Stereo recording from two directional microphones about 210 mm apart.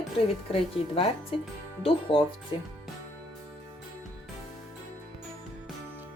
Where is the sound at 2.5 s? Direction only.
25° left (ahead or behind).